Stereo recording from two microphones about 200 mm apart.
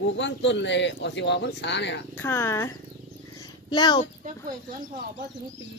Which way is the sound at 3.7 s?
20° left (ahead or behind).